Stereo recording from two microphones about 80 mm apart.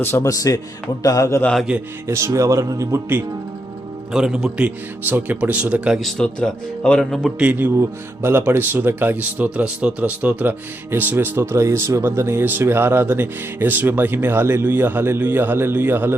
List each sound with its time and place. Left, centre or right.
0.0 s a man's voice: left
0.3 s a man's voice: left
1.7 s a man's voice: centre
2.0 s speech: right
4.1 s a man's voice: centre
5.0 s speech: right
6.0 s a man's voice: centre
7.3 s speech: centre